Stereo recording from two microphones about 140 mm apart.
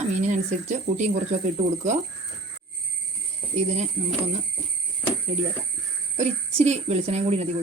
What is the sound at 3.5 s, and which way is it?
Speech, 55° right (ahead or behind).